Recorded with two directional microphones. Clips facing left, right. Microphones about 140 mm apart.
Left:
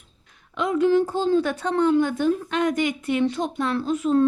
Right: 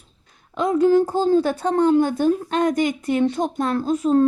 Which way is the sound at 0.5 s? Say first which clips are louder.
Right 3 dB; 40° right (ahead or behind).